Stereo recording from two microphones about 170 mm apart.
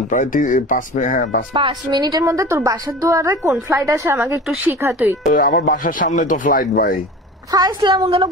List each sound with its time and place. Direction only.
0.1 s speech: 50° left (ahead or behind)
1.5 s a woman's voice: 30° right (ahead or behind); by 5.1 s 15° right (ahead or behind)
5.3 s speech: 55° left (ahead or behind)
7.5 s a woman's voice: 25° right (ahead or behind)